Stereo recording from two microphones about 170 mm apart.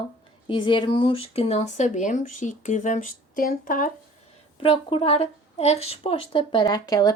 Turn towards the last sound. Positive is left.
turn(degrees=20)  # may be behind; listen again after turning